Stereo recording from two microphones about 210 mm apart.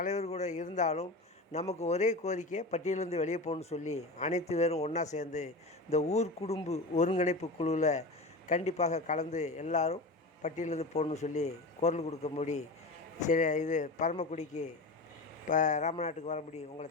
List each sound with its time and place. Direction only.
0.0 s speech: 35° left (ahead or behind)